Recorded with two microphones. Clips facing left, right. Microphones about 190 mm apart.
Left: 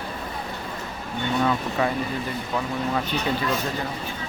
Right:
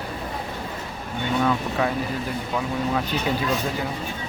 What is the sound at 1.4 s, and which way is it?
Speech, centre (ahead or behind).